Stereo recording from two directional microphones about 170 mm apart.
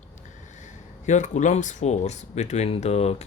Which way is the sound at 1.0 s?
45° left (ahead or behind).